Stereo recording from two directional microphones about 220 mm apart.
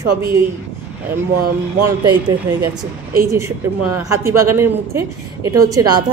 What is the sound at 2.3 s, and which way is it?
Speech, 15° right (ahead or behind).